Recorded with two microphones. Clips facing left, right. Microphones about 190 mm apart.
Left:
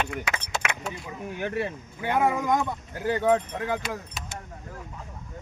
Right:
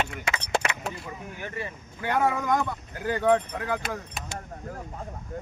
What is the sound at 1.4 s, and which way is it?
Speech, 70° left (ahead or behind).